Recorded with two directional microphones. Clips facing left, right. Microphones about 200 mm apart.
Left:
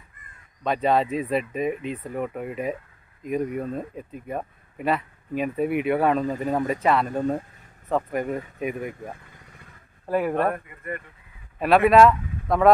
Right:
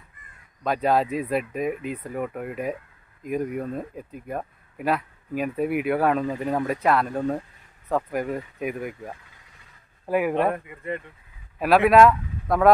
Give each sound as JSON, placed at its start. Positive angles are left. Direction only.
{"t": 0.7, "sound": "speech", "side_deg": -5}
{"t": 11.6, "sound": "speech", "side_deg": -5}